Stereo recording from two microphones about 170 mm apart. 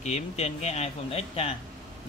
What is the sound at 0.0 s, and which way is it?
Speech, 40° left (ahead or behind).